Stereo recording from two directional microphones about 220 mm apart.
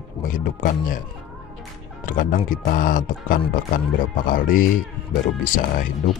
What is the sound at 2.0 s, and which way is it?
Speech, 40° left (ahead or behind).